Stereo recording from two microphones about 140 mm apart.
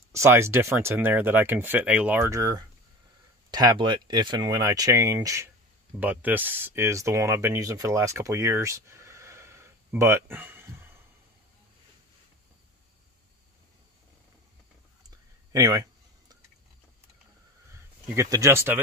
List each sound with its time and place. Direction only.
0.1 s speech: 20° right (ahead or behind)
5.9 s speech: 10° right (ahead or behind)
15.0 s a sound: 25° right (ahead or behind)
18.0 s speech: 20° right (ahead or behind)